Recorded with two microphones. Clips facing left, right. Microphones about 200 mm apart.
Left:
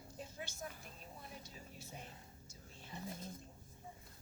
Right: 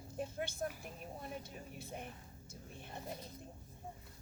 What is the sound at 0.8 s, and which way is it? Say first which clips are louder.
Speech: right 7 dB; 60° right (ahead or behind).